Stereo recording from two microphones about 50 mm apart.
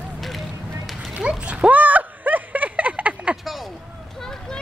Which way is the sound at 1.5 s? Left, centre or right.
Right.